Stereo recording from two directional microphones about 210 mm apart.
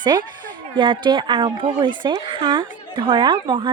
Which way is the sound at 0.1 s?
20° right (ahead or behind).